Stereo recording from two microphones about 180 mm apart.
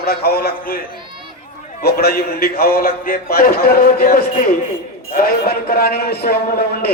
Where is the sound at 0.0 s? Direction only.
60° left (ahead or behind).